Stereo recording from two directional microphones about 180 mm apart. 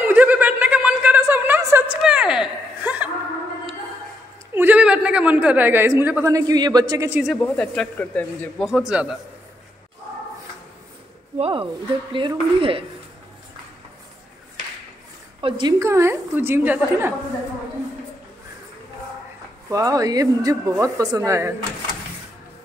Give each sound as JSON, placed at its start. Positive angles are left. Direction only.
{"t": 0.0, "sound": "chuckle", "side_deg": -10}
{"t": 2.0, "sound": "a sound", "side_deg": -5}
{"t": 2.8, "sound": "music", "side_deg": -10}
{"t": 4.6, "sound": "a woman's voice", "side_deg": -10}
{"t": 7.1, "sound": "a woman's voice", "side_deg": -10}
{"t": 7.4, "sound": "a man's voice", "side_deg": 5}
{"t": 11.3, "sound": "speech", "side_deg": -35}
{"t": 15.4, "sound": "speech", "side_deg": -25}
{"t": 15.8, "sound": "a woman's voice", "side_deg": -15}
{"t": 19.7, "sound": "speech", "side_deg": -20}